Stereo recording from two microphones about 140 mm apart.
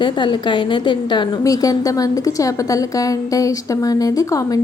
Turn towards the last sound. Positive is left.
turn(degrees=25)  # may be behind; listen again after turning